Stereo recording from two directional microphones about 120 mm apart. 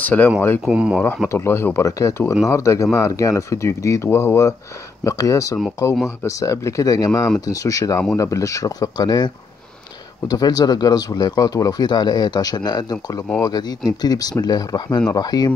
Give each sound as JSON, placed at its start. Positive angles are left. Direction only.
{"t": 0.0, "sound": "speech", "side_deg": 10}
{"t": 0.7, "sound": "speech", "side_deg": -5}
{"t": 1.3, "sound": "speech", "side_deg": 20}